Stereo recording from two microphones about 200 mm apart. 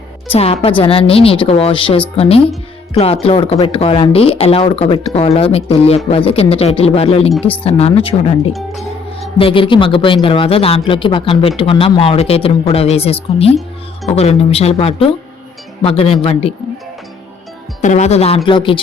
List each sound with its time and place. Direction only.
0.3 s speech: 30° left (ahead or behind)
17.7 s speech: 35° left (ahead or behind)